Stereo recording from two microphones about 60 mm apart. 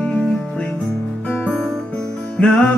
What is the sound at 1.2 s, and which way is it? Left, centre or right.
Music, left.